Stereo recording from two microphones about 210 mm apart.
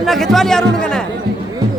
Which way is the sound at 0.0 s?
Centre (ahead or behind).